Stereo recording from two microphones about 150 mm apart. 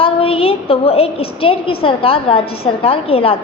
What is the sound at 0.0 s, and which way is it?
A woman's voice, 40° left (ahead or behind).